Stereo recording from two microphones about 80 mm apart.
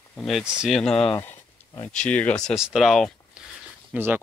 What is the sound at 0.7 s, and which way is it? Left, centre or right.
Speech, centre.